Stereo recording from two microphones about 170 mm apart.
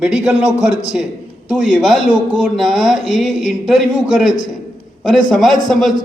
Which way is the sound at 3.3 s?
45° left (ahead or behind).